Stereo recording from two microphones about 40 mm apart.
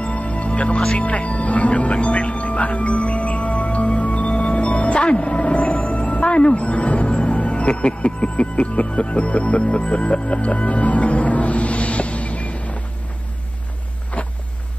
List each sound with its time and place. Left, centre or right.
0.0 s music: left
0.9 s speech: left
14.2 s a sound: left